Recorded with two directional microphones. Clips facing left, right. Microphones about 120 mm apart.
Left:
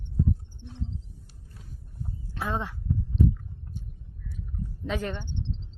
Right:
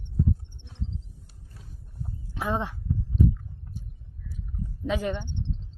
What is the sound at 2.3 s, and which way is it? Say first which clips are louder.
Speech: right 3 dB; 15° right (ahead or behind).